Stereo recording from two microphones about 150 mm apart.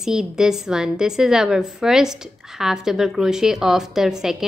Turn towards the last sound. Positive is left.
turn(degrees=-5)  # may be behind; listen again after turning